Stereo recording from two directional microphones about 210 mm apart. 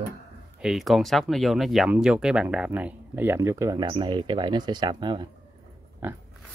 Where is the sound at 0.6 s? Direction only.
Centre (ahead or behind); by 5.3 s 20° right (ahead or behind).